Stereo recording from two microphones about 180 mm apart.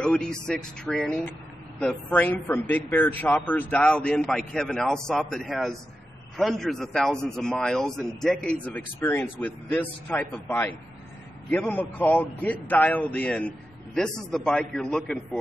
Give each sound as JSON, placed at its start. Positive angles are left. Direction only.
{"t": 0.0, "sound": "a man's voice", "side_deg": 5}